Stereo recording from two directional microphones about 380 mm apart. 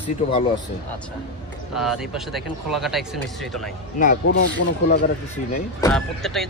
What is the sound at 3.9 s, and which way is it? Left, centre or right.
Speech, left.